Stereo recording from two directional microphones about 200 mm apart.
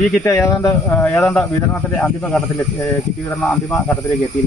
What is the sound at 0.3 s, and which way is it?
Speech, centre (ahead or behind).